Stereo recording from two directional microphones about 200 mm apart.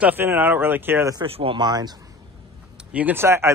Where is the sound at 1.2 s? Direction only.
25° right (ahead or behind).